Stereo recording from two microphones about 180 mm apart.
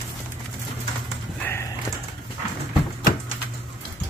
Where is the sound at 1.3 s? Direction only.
15° left (ahead or behind).